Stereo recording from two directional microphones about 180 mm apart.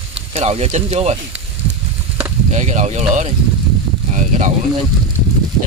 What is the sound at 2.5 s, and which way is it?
Speech, 40° right (ahead or behind).